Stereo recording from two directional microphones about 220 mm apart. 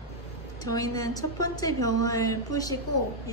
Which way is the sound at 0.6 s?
15° left (ahead or behind).